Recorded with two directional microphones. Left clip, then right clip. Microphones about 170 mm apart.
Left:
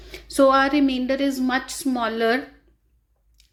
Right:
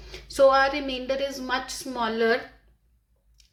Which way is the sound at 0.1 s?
30° left (ahead or behind).